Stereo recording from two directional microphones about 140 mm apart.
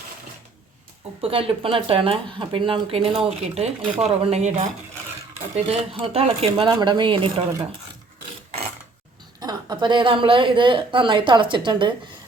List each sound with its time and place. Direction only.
1.2 s speech: 40° right (ahead or behind)
5.6 s speech: 45° right (ahead or behind)
9.4 s speech: 30° right (ahead or behind)